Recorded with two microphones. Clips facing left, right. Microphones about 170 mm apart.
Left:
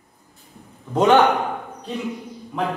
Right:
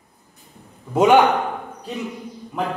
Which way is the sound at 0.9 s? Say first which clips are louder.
Right 1 dB; 10° right (ahead or behind).